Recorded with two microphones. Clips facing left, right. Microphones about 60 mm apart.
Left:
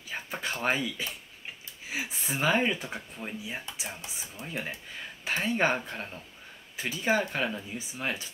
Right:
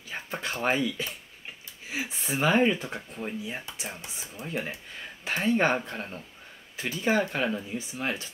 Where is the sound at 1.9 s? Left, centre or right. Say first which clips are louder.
Right 1 dB; centre.